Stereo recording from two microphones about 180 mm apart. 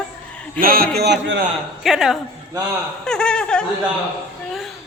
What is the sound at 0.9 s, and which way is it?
Speech, 65° right (ahead or behind).